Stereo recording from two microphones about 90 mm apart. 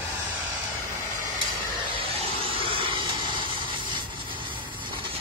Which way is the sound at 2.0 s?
85° right.